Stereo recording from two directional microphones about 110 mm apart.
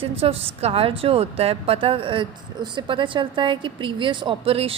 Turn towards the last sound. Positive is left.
turn(degrees=-60)  # may be behind; listen again after turning